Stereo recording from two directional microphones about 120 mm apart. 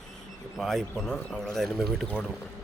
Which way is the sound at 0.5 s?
Centre (ahead or behind).